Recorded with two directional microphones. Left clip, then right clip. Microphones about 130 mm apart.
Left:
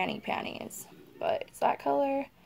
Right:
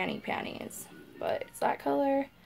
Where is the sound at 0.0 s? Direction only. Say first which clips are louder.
Left 1 dB; 15° left (ahead or behind).